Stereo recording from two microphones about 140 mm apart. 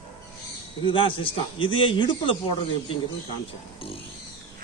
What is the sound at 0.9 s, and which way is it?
A man's voice, 40° left (ahead or behind).